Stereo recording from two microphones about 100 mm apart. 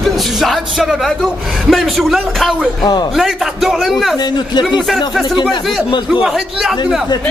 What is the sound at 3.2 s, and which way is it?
Speech, centre (ahead or behind).